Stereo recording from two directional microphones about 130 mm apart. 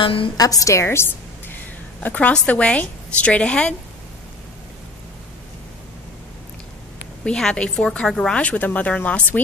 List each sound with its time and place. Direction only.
0.0 s a woman's voice: 45° left (ahead or behind)
0.4 s a woman's voice: 25° left (ahead or behind); by 3.7 s 10° left (ahead or behind)
7.2 s a woman's voice: 5° left (ahead or behind)